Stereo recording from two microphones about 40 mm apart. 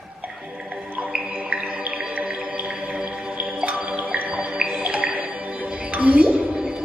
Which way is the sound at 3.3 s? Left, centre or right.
Right.